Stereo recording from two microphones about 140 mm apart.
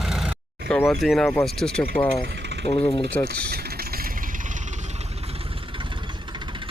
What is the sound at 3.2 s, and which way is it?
Speech, 20° left (ahead or behind).